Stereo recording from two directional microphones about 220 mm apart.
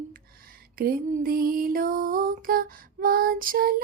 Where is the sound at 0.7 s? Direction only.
40° right (ahead or behind).